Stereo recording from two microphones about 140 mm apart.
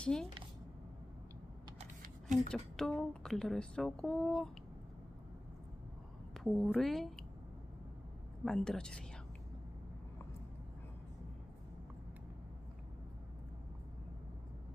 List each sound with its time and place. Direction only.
0.0 s speech: 5° left (ahead or behind)
2.0 s a sound: 65° right (ahead or behind)
2.5 s speech: 5° left (ahead or behind)
6.3 s a woman's voice: 5° left (ahead or behind)
8.4 s speech: 5° left (ahead or behind)